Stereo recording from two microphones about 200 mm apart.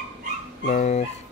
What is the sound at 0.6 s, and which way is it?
Speech, 40° left (ahead or behind).